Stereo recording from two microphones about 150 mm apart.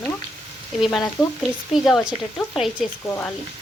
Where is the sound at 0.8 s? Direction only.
Centre (ahead or behind).